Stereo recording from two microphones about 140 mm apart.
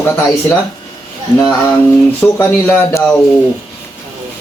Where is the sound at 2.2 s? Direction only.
10° left (ahead or behind).